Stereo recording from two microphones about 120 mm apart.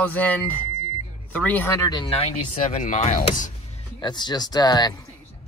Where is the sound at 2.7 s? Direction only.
90° left.